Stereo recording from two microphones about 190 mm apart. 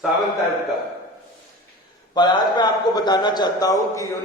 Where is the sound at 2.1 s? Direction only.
25° left (ahead or behind).